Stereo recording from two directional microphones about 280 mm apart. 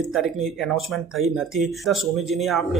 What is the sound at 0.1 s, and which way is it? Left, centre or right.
Speech, centre.